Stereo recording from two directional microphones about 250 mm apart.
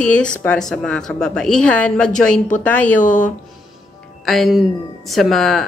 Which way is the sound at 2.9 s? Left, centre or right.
Left.